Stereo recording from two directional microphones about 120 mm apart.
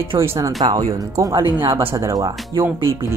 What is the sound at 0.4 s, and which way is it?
Speech, 30° right (ahead or behind).